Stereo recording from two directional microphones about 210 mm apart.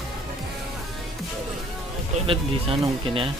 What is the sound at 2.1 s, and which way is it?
Speech, 25° right (ahead or behind).